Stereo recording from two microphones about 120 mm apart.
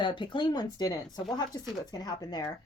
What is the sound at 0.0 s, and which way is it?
A woman's voice, 40° left (ahead or behind).